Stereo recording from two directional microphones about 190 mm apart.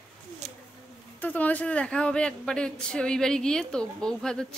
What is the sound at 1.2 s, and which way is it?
A woman's voice, 10° left (ahead or behind).